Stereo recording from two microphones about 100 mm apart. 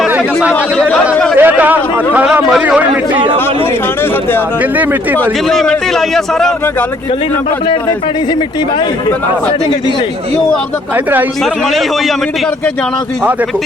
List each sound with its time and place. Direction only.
1.4 s speech: 15° right (ahead or behind)
5.5 s a man's voice: centre (ahead or behind)
10.9 s speech: 20° right (ahead or behind)